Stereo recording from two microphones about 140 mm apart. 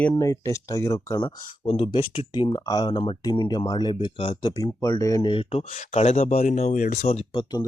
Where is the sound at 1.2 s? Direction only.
40° left (ahead or behind).